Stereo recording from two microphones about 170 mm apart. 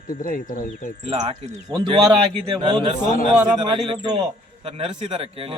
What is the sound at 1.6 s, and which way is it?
A man's voice, 30° right (ahead or behind).